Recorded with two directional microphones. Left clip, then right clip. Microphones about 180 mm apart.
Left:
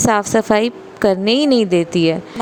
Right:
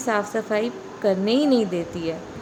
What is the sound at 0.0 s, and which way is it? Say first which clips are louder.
A woman's voice: left 9 dB; 55° left (ahead or behind).